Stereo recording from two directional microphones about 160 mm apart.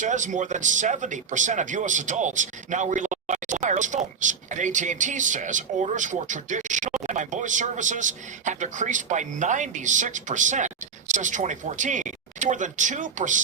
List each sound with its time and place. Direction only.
0.0 s speech: 50° right (ahead or behind)